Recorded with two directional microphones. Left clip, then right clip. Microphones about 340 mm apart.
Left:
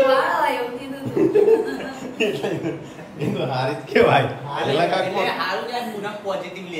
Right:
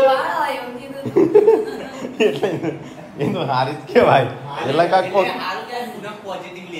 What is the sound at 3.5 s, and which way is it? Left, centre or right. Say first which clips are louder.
Speech: right 3 dB; centre.